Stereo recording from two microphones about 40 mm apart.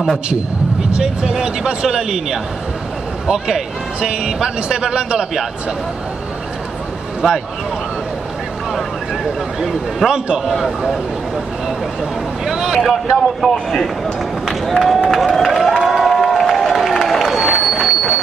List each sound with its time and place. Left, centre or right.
0.9 s a man's voice: centre
7.2 s speech: centre
9.2 s a man's voice: centre
10.4 s a man's voice: centre
12.4 s vehicle: centre
13.4 s speech: centre
14.7 s a man's voice: centre
15.0 s crowd: centre
17.6 s a sound: centre